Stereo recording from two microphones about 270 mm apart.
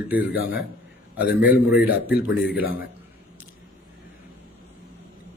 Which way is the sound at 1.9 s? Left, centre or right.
Left.